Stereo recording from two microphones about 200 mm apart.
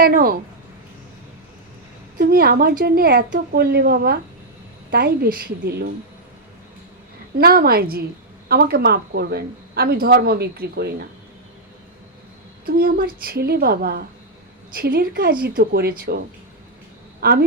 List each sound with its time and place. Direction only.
0.0 s speech: 45° right (ahead or behind)
2.1 s speech: 50° right (ahead or behind)
7.3 s speech: 50° right (ahead or behind)
12.6 s speech: 50° right (ahead or behind)